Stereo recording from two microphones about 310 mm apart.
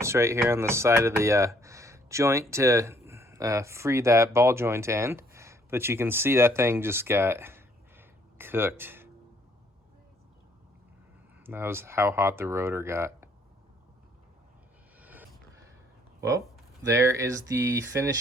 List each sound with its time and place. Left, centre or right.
0.0 s speech: centre
11.4 s speech: centre
14.9 s vehicle: centre
16.8 s speech: centre